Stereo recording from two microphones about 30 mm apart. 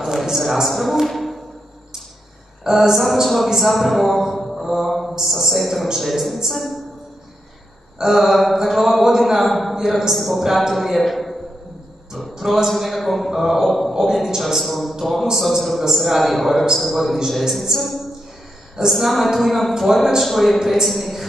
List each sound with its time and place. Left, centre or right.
0.2 s a man's voice: centre
1.0 s music: centre
2.7 s speech: centre
3.5 s mantra: centre
5.2 s speech: centre
8.1 s speech: centre
9.8 s speech: centre
12.4 s a sound: centre
12.6 s a man's voice: centre
20.5 s a woman's voice: centre
20.8 s speech: centre